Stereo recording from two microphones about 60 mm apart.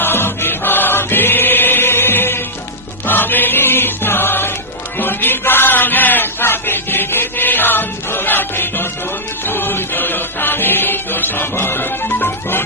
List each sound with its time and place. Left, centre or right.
0.0 s choir: left
4.9 s a sound: left
9.4 s music: left